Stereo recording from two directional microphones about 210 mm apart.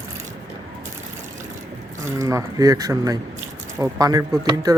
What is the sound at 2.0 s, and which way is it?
Speech, 15° right (ahead or behind).